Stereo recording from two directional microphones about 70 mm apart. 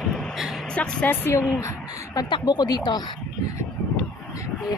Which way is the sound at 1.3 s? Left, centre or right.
Left.